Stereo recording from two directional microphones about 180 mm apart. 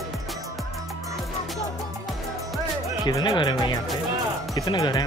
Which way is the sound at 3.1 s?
20° left (ahead or behind).